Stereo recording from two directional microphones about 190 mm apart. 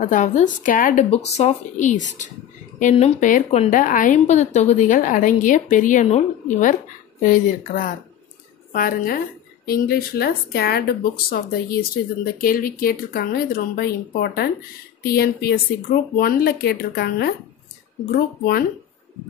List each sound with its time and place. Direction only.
0.0 s a woman's voice: 40° left (ahead or behind)